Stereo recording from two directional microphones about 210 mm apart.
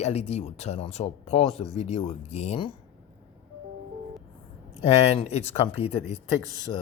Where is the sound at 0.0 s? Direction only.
30° left (ahead or behind).